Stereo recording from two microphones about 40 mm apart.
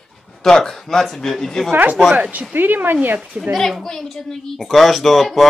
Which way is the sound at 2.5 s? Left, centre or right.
Right.